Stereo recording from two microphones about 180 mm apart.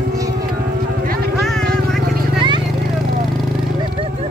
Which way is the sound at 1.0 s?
60° right (ahead or behind).